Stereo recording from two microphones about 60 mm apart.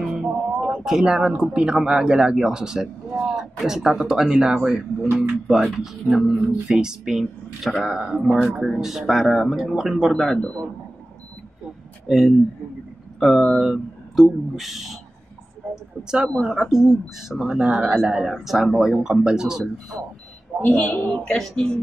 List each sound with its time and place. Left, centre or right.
0.0 s music: centre
0.8 s speech: centre
5.6 s speech: centre
12.1 s speech: centre
15.7 s a sound: centre
16.4 s speech: centre
17.6 s a man's voice: right
18.0 s speech: centre
20.6 s a woman's voice: left
21.2 s speech: centre